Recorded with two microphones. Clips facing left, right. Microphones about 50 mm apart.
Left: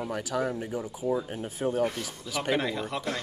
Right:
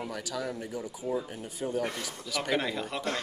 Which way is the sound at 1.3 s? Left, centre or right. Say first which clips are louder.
Left 4 dB; left.